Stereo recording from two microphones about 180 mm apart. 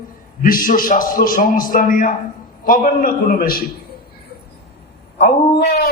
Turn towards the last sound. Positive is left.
turn(degrees=65)  # may be behind; listen again after turning